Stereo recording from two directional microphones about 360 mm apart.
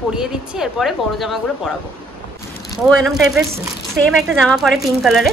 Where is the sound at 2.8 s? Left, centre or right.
Centre.